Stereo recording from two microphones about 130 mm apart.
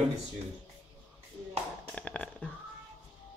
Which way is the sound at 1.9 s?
10° left (ahead or behind).